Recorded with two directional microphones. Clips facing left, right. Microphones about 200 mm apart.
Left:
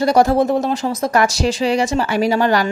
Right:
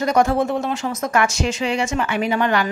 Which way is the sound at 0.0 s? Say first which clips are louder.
Left 4 dB; 35° left (ahead or behind).